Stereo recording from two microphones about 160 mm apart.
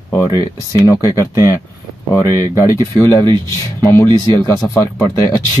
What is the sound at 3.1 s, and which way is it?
Speech, 20° left (ahead or behind).